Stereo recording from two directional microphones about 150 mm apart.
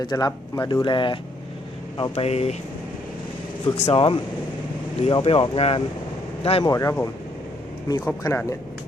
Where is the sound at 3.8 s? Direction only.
35° left (ahead or behind).